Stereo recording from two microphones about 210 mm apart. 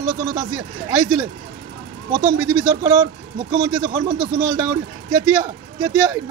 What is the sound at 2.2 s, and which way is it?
Speech, 10° right (ahead or behind).